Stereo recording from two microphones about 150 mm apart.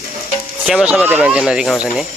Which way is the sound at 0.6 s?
5° right (ahead or behind).